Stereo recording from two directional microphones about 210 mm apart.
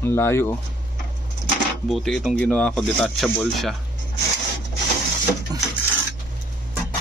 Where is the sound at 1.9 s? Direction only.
Centre (ahead or behind).